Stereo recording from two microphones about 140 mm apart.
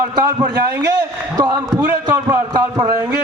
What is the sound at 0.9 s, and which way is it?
A man's voice, 30° right (ahead or behind).